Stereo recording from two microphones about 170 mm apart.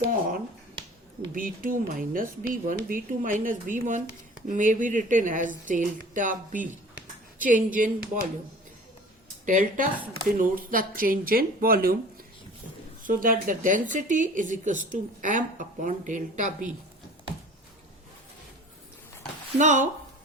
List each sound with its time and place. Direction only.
0.0 s finger snapping: 55° right (ahead or behind)
1.3 s a woman's voice: 55° right (ahead or behind)
9.5 s a woman's voice: 50° right (ahead or behind)
13.0 s a woman's voice: 55° right (ahead or behind)
19.5 s a woman's voice: 45° right (ahead or behind)